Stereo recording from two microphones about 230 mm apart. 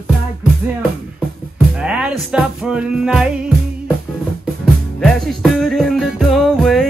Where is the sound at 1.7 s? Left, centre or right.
Centre.